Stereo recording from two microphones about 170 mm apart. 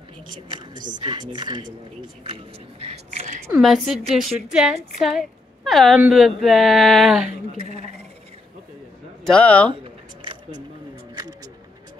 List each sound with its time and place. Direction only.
0.3 s speech: 25° right (ahead or behind)
2.2 s a sound: 35° right (ahead or behind)
3.5 s a woman's voice: centre (ahead or behind)
9.3 s speech: 10° left (ahead or behind)